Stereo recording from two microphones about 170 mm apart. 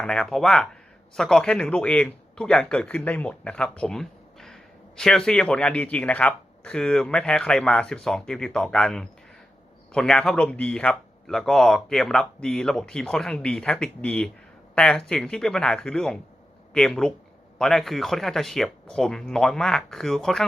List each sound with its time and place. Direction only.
0.0 s speech: 5° left (ahead or behind)